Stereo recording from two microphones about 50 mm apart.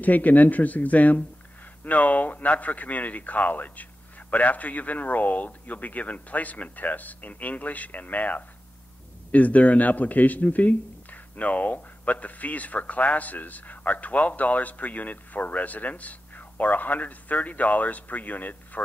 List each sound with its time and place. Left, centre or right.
0.0 s speech: left